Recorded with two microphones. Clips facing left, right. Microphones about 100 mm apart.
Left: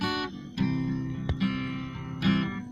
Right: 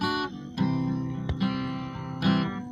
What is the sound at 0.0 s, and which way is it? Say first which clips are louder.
Music: right 2 dB; 40° right (ahead or behind).